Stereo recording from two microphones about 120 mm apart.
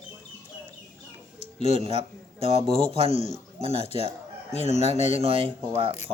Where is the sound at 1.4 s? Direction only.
70° left (ahead or behind).